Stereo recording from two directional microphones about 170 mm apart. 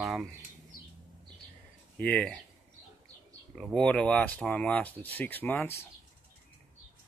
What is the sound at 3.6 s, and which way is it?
Speech, 5° left (ahead or behind).